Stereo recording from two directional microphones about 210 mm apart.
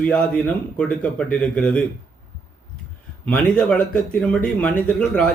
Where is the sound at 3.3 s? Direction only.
5° left (ahead or behind).